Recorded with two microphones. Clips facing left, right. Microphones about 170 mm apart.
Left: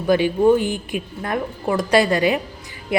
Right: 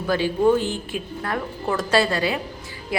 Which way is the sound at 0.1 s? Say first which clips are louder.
Left 4 dB; 15° left (ahead or behind).